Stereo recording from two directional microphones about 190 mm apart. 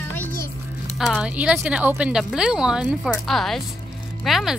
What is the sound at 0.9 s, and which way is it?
Speech, centre (ahead or behind).